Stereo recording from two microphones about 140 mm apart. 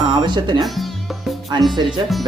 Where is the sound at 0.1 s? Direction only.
30° right (ahead or behind).